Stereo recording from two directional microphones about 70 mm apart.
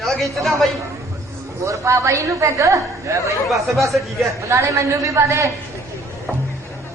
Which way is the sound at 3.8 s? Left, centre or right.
Centre.